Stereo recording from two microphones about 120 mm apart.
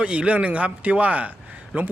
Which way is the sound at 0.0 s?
10° right (ahead or behind).